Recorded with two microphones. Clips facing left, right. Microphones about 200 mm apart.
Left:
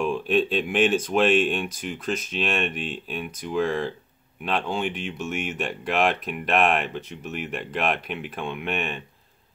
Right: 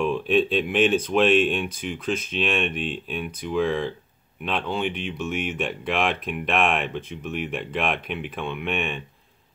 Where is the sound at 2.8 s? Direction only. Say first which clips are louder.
Right 2 dB; 5° left (ahead or behind).